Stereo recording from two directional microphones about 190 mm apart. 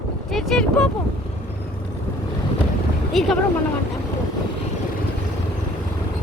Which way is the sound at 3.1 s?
Centre (ahead or behind).